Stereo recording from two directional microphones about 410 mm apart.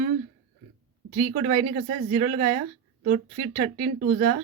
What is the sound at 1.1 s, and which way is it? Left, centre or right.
A woman's voice, centre.